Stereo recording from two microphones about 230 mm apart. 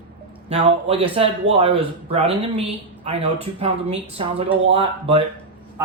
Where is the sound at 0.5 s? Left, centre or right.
Right.